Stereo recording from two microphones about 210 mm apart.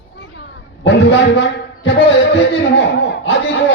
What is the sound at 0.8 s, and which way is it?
A man's voice, 55° left (ahead or behind).